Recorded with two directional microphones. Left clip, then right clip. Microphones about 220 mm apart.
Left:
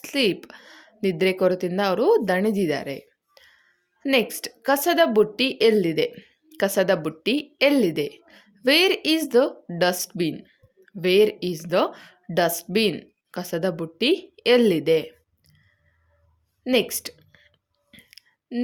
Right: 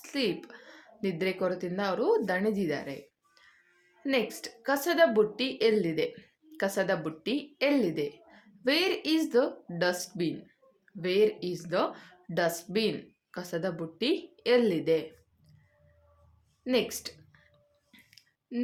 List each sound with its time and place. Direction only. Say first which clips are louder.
0.0 s speech: left 9 dB; 40° left (ahead or behind)
16.6 s a woman's voice: left 7 dB; 35° left (ahead or behind)
17.9 s a sound: left 8 dB; 30° left (ahead or behind)